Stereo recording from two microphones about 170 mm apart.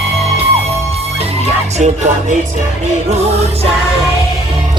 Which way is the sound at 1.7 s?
45° right (ahead or behind).